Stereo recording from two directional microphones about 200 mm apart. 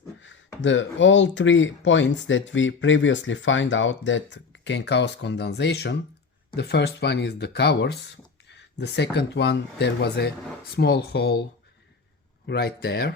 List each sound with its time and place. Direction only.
0.2 s speech: 70° left (ahead or behind)
12.5 s speech: 50° left (ahead or behind)